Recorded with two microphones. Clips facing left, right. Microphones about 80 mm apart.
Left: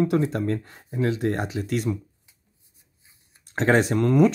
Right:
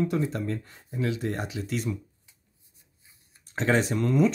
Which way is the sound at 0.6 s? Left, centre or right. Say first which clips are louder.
Left 5 dB; left.